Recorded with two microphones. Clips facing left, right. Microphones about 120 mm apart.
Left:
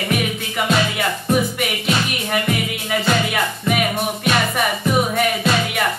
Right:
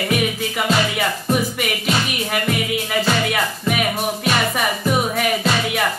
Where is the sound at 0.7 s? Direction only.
Centre (ahead or behind).